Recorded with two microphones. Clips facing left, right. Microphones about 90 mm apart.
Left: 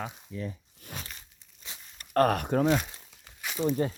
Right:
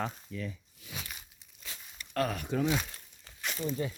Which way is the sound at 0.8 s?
50° left (ahead or behind).